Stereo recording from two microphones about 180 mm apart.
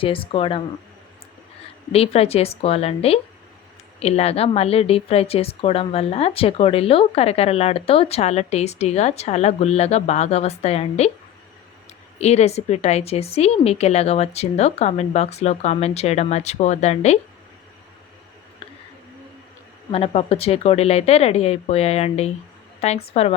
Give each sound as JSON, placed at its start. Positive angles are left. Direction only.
{"t": 0.0, "sound": "speech", "side_deg": 30}
{"t": 1.9, "sound": "speech", "side_deg": 35}
{"t": 12.2, "sound": "speech", "side_deg": 35}
{"t": 18.6, "sound": "a sound", "side_deg": 30}
{"t": 19.9, "sound": "speech", "side_deg": 35}